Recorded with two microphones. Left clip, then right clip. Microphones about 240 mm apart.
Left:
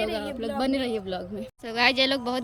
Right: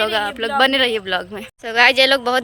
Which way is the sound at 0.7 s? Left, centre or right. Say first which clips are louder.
Right 11 dB; centre.